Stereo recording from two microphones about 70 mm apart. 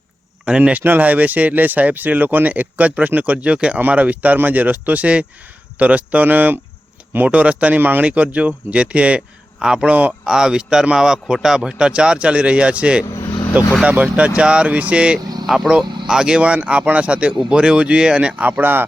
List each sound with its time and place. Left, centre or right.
0.4 s speech: centre
10.2 s speech: centre
13.1 s vehicle: left
13.8 s speech: right
15.4 s speech: centre
18.6 s speech: right